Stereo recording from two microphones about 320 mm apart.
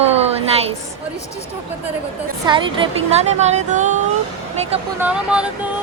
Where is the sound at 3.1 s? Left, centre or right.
Right.